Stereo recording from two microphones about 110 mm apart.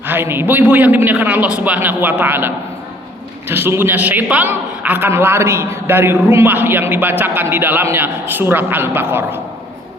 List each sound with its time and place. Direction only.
0.1 s a man's voice: 20° right (ahead or behind)
3.5 s a woman's voice: 20° right (ahead or behind)